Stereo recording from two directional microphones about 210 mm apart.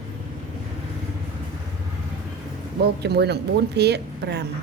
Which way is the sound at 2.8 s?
50° right (ahead or behind).